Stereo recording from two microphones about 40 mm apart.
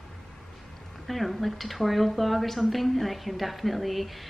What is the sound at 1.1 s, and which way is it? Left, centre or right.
A woman's voice, centre.